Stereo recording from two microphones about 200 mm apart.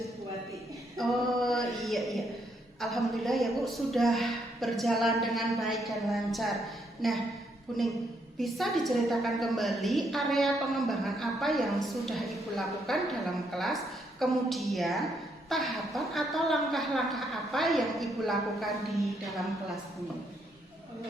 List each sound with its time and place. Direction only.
0.9 s a sound: centre (ahead or behind)
2.8 s a woman's voice: centre (ahead or behind)
8.4 s a woman's voice: centre (ahead or behind)